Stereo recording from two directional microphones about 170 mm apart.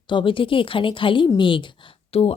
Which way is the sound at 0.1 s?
30° left (ahead or behind).